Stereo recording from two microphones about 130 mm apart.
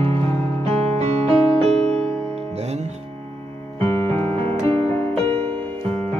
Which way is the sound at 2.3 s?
55° right (ahead or behind).